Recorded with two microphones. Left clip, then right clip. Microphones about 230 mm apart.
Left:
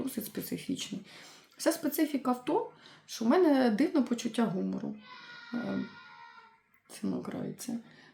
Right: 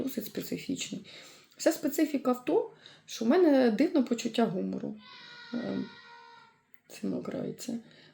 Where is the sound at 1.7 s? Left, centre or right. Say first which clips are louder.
Right 2 dB; centre.